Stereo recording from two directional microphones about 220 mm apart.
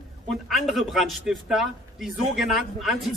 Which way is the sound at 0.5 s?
Centre (ahead or behind).